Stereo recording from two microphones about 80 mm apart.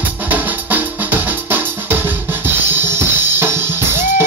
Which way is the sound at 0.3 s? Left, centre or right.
Right.